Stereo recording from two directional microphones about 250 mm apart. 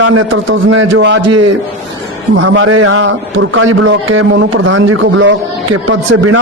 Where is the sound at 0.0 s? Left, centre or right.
Right.